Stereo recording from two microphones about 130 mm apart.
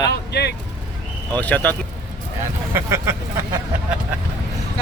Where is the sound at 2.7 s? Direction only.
20° right (ahead or behind).